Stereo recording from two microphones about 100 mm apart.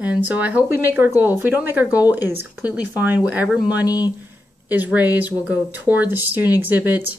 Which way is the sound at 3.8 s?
40° left (ahead or behind).